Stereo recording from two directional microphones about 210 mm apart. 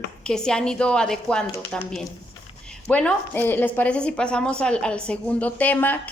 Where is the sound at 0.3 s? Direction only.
5° left (ahead or behind).